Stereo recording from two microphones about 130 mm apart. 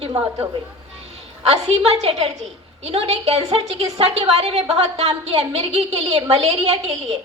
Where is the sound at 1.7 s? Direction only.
50° right (ahead or behind).